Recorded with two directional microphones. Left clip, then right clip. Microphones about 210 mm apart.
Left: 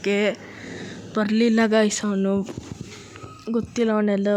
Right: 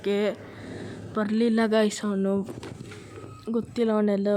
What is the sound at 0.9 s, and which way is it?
Speech, 30° left (ahead or behind).